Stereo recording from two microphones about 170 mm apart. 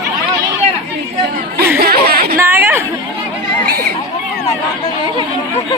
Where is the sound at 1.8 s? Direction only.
65° right (ahead or behind).